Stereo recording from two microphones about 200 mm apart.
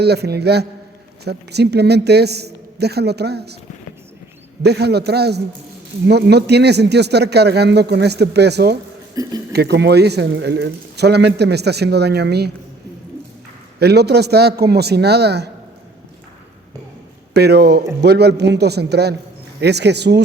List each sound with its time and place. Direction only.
0.0 s speech: 55° right (ahead or behind)
4.6 s speech: 55° right (ahead or behind)
9.2 s speech: 15° right (ahead or behind)
9.5 s speech: 55° right (ahead or behind)
13.7 s speech: 55° right (ahead or behind)
17.3 s speech: 55° right (ahead or behind)